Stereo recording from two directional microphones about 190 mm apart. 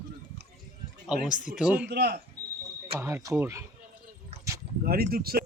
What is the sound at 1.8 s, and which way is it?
Speech, 60° right (ahead or behind).